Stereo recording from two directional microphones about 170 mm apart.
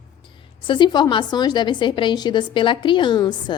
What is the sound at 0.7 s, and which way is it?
A woman's voice, 25° left (ahead or behind).